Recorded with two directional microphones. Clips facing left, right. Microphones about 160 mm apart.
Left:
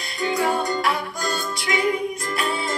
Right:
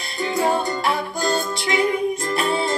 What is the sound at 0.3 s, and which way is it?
Music, 25° right (ahead or behind).